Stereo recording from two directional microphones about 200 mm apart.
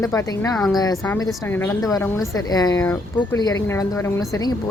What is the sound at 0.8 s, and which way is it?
A woman's voice, 15° left (ahead or behind).